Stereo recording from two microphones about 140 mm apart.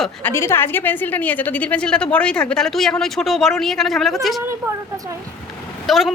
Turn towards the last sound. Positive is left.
turn(degrees=0)  # may be behind; listen again after turning